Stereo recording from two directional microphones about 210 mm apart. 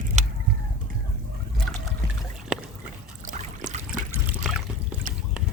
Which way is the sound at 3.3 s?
35° right (ahead or behind).